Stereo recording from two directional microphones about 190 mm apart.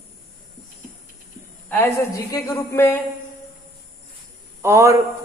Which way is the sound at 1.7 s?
10° left (ahead or behind).